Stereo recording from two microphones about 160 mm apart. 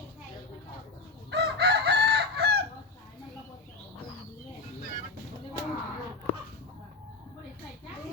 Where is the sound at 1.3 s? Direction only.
90° right.